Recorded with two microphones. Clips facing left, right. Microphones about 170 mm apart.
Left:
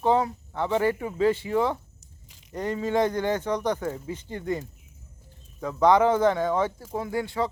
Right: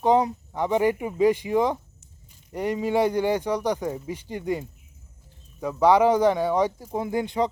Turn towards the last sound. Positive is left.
turn(degrees=-20)  # may be behind; listen again after turning